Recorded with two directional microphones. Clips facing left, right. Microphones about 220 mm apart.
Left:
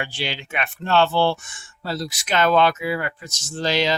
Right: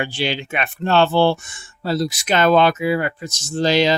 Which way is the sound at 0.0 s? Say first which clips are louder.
Right 6 dB; 20° right (ahead or behind).